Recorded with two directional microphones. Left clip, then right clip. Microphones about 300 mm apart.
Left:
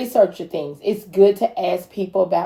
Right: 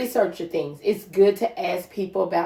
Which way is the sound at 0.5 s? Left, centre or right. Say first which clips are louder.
Left 1 dB; left.